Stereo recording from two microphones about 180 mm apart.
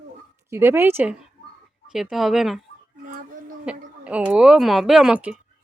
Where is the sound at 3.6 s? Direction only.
5° right (ahead or behind).